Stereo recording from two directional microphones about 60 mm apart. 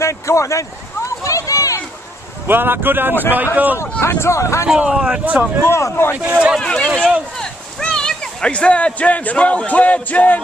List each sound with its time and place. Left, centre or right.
0.0 s a sound: left
2.4 s speech: right
4.0 s speech: left
4.6 s speech: centre
5.2 s speech: right
5.7 s speech: left
6.1 s speech: right
6.6 s a sound: centre